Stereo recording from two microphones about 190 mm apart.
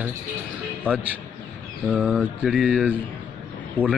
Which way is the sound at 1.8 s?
5° right (ahead or behind).